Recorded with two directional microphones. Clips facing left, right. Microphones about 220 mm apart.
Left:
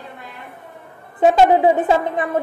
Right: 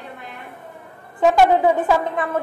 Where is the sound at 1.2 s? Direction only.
20° left (ahead or behind).